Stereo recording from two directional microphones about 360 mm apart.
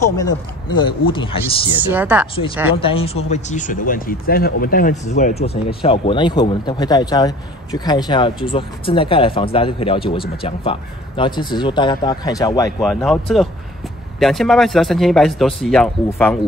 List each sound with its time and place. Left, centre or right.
0.7 s speech: centre
1.9 s speech: centre
2.7 s speech: centre